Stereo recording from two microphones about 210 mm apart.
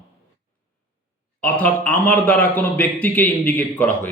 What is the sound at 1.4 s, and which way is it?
A man's voice, 5° left (ahead or behind).